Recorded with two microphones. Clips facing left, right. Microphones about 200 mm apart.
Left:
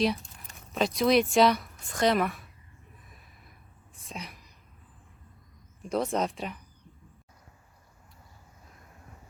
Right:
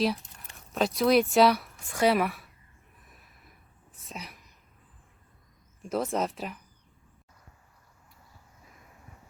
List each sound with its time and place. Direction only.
0.7 s a woman's voice: centre (ahead or behind)
4.1 s a sound: 5° right (ahead or behind)
5.8 s a woman's voice: centre (ahead or behind)